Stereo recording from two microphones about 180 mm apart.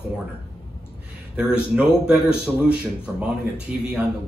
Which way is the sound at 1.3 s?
5° right (ahead or behind).